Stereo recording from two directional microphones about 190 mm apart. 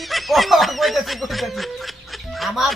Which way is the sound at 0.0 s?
Centre (ahead or behind).